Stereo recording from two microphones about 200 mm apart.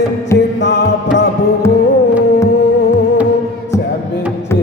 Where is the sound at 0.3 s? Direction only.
60° left (ahead or behind).